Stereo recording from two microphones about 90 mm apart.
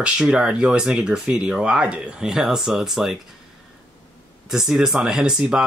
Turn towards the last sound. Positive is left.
turn(degrees=-5)  # may be behind; listen again after turning